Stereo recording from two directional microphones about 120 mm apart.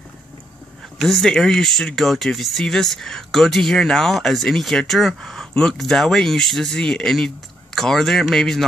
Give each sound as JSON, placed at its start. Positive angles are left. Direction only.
{"t": 0.9, "sound": "speech", "side_deg": 0}